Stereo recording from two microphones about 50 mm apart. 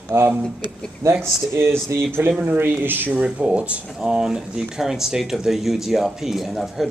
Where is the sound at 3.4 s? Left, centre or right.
Right; by 6.8 s centre.